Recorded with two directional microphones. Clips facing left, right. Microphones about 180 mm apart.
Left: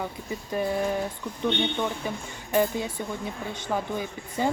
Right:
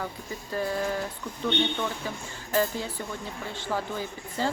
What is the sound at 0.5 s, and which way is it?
Speech, 15° left (ahead or behind).